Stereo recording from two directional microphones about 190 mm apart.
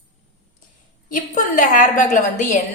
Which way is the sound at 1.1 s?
45° left (ahead or behind).